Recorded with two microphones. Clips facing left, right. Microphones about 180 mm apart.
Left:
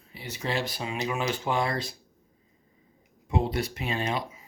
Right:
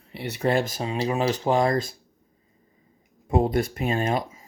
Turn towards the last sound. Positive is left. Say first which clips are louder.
# right 5 dB
turn(degrees=-45)  # may be behind; listen again after turning